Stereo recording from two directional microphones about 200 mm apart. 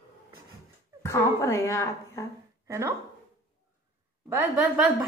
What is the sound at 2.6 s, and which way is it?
Speech, 15° right (ahead or behind).